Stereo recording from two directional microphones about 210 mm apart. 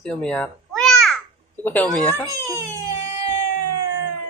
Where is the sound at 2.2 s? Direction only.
15° right (ahead or behind).